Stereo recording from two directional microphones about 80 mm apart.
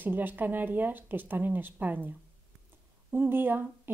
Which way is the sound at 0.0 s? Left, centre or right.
Right.